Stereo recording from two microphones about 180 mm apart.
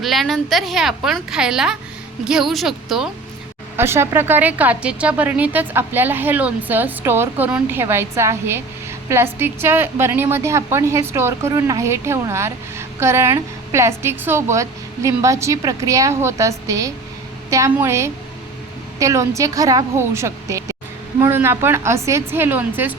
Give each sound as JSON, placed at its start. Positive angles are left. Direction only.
{"t": 0.0, "sound": "a woman's voice", "side_deg": 0}
{"t": 3.8, "sound": "a woman's voice", "side_deg": -15}